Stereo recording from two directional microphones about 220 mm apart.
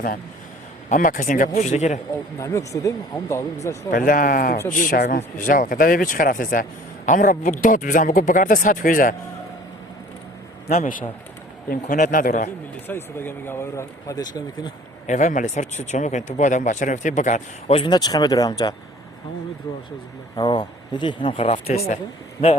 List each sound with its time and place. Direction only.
0.9 s speech: 35° left (ahead or behind)
2.4 s speech: 15° left (ahead or behind)
3.9 s speech: 40° left (ahead or behind)
10.7 s speech: 35° left (ahead or behind)
12.9 s speech: 10° left (ahead or behind)
15.0 s speech: 35° left (ahead or behind); by 18.7 s 15° left (ahead or behind)
20.3 s speech: 20° left (ahead or behind)